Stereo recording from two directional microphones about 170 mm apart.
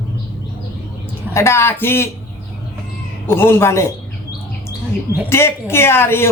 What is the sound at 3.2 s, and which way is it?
Speech, 15° left (ahead or behind).